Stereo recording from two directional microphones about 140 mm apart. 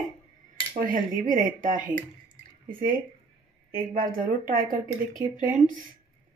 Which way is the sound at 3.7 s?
90° right.